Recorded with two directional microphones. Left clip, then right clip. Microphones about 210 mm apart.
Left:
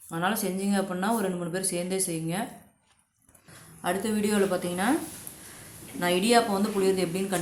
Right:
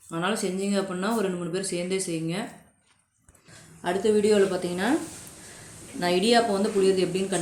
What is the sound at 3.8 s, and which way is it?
A woman's voice, 20° left (ahead or behind).